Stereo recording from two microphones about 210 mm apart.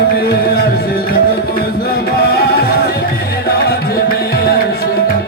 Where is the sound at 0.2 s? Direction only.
50° left (ahead or behind).